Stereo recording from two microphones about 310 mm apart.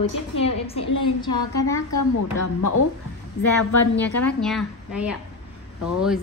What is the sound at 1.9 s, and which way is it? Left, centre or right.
A woman's voice, left.